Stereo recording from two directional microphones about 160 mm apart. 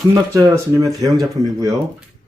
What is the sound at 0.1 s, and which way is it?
Speech, 20° right (ahead or behind).